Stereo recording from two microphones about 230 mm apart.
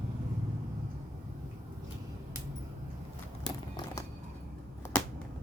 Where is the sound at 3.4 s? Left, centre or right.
Centre.